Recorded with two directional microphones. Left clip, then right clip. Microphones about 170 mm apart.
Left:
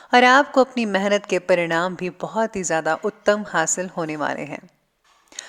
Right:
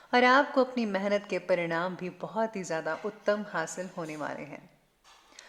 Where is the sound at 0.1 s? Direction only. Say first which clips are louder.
Left 9 dB; 40° left (ahead or behind).